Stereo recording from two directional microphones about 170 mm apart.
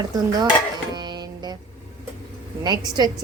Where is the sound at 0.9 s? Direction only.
25° right (ahead or behind).